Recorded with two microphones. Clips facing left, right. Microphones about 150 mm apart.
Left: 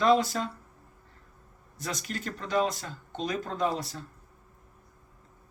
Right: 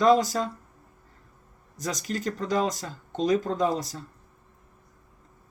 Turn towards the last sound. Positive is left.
turn(degrees=-40)  # may be behind; listen again after turning